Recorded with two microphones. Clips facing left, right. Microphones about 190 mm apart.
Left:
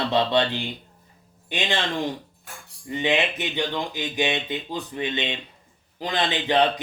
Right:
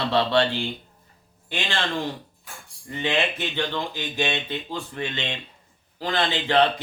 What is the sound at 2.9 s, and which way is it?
Speech, 15° left (ahead or behind).